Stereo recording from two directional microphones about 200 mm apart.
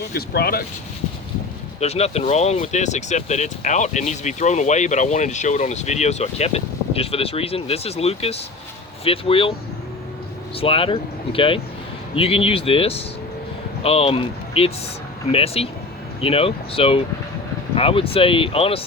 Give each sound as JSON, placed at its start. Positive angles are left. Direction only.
{"t": 0.1, "sound": "speech", "side_deg": 50}
{"t": 1.8, "sound": "speech", "side_deg": 30}
{"t": 10.6, "sound": "speech", "side_deg": 30}